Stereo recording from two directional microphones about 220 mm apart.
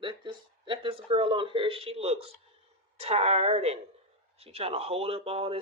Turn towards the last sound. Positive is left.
turn(degrees=-25)  # may be behind; listen again after turning